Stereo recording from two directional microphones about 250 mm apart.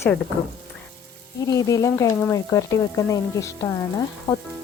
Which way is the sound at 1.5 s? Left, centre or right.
Centre.